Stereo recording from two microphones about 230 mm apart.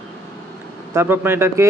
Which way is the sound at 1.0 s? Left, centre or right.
Centre.